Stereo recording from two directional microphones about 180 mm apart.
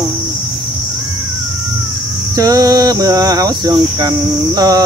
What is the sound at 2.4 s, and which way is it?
Cricket, 20° right (ahead or behind).